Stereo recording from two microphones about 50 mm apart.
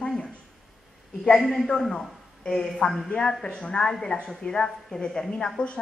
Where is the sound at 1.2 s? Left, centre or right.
Centre.